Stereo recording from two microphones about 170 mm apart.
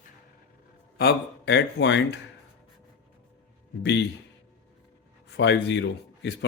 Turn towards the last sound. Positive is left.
turn(degrees=90)